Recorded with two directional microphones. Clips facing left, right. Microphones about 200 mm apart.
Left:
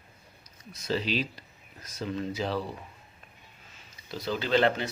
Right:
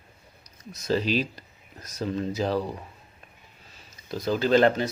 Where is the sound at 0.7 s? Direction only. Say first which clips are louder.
Right 5 dB; 45° right (ahead or behind).